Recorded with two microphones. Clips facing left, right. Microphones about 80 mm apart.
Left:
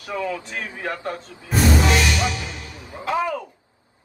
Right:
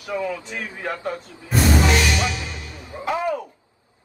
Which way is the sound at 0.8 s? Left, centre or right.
Centre.